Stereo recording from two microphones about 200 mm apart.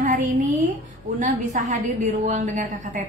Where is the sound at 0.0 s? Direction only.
40° right (ahead or behind).